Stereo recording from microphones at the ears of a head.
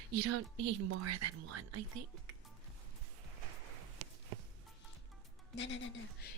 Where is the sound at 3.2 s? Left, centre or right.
Right.